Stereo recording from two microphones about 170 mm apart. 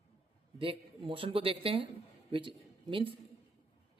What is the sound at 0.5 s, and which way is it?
Speech, 30° right (ahead or behind).